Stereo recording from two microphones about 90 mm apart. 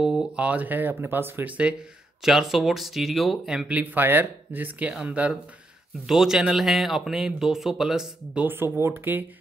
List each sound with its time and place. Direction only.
0.0 s a sound: 5° right (ahead or behind)
0.5 s speech: 20° right (ahead or behind)
6.0 s speech: 5° right (ahead or behind)
8.5 s speech: 25° right (ahead or behind)